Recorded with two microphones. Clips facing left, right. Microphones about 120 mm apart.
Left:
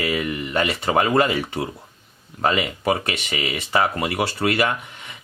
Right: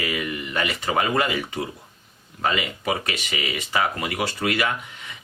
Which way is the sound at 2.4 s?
35° left (ahead or behind).